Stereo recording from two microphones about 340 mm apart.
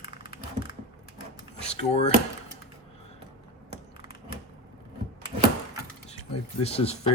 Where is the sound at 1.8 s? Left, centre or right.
Centre.